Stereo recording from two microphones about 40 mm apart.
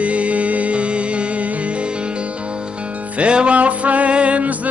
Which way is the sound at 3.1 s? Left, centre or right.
Right.